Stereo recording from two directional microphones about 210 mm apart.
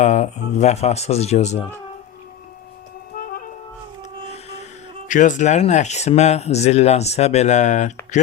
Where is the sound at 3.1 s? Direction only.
45° left (ahead or behind).